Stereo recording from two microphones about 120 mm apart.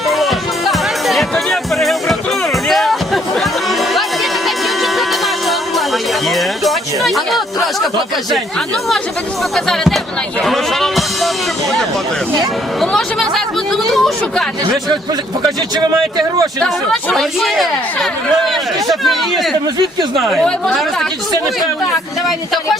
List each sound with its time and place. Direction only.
0.1 s music: centre (ahead or behind)
9.6 s speech: 5° left (ahead or behind)
12.8 s speech: 5° left (ahead or behind)
13.8 s a sound: centre (ahead or behind)
15.7 s a man's voice: 35° right (ahead or behind)
16.6 s speech: centre (ahead or behind)